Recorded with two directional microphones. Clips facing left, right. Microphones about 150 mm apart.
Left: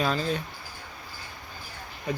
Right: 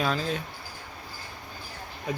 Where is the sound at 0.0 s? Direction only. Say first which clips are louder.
Left 1 dB; centre (ahead or behind).